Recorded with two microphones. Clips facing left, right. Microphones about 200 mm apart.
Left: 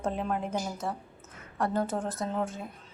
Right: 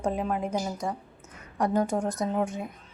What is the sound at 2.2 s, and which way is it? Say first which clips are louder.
Speech: right 4 dB; 15° right (ahead or behind).